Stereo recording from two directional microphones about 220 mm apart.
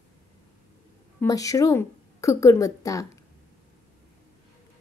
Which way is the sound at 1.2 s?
15° left (ahead or behind).